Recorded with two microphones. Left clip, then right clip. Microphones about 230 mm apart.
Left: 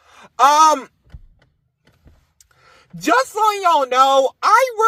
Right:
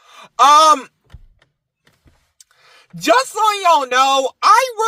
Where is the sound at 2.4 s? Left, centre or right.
Right.